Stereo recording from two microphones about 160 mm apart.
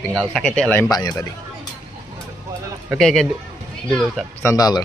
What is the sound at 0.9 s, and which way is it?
Speech, 25° left (ahead or behind).